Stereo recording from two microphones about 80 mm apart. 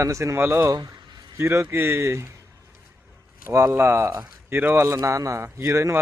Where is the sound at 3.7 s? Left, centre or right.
Right.